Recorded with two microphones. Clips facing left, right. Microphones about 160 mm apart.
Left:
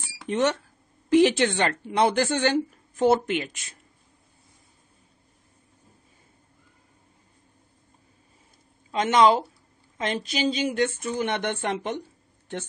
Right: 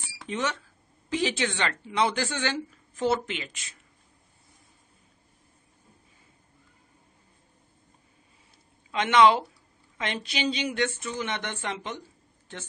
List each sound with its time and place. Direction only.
0.3 s speech: 60° left (ahead or behind)
8.9 s speech: 40° left (ahead or behind)